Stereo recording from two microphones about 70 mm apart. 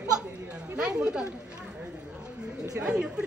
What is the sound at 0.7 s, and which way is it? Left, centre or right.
Speech, centre.